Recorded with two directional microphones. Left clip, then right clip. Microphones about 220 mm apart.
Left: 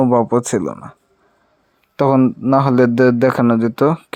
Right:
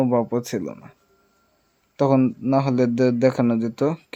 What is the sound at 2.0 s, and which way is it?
Speech, 20° left (ahead or behind).